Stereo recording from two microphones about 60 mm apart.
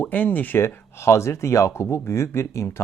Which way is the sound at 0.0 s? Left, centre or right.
Left.